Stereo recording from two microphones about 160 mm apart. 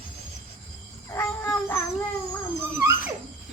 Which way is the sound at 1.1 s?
15° left (ahead or behind).